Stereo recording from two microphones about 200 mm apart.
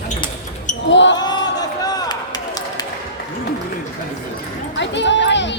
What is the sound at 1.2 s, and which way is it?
Run, 20° left (ahead or behind).